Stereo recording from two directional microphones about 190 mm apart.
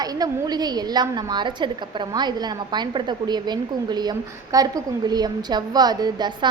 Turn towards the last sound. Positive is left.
turn(degrees=-20)  # may be behind; listen again after turning